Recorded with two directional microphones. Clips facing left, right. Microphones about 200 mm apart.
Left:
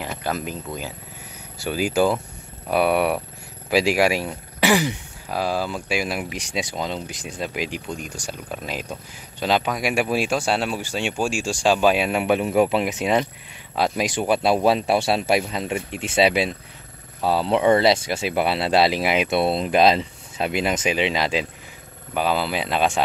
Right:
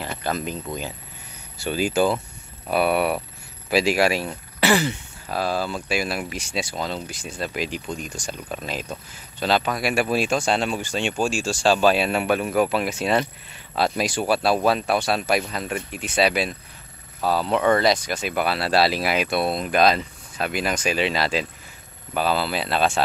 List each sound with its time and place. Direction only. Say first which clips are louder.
0.0 s speech: even; 10° left (ahead or behind)